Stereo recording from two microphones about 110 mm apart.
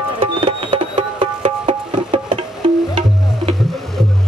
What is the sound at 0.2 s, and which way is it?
Music, 50° right (ahead or behind).